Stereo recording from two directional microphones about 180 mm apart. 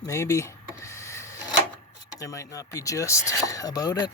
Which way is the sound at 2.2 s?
20° left (ahead or behind).